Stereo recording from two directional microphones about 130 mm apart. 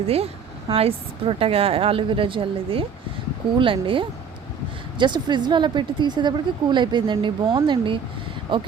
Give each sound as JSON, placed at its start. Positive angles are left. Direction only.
{"t": 0.7, "sound": "a woman's voice", "side_deg": -50}